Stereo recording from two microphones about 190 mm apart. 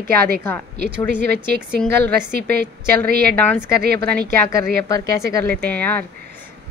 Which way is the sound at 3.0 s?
55° right (ahead or behind).